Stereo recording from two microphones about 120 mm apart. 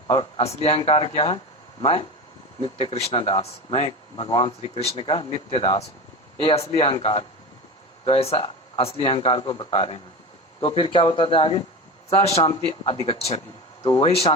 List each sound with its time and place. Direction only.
0.1 s a man's voice: 50° left (ahead or behind)
12.2 s a man's voice: 60° left (ahead or behind)